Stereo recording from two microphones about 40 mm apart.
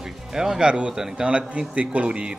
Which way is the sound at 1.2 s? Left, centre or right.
Right.